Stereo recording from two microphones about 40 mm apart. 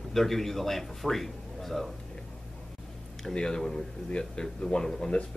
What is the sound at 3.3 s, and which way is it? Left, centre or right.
Speech, centre.